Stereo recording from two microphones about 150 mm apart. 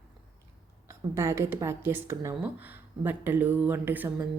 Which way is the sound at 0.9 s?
20° right (ahead or behind).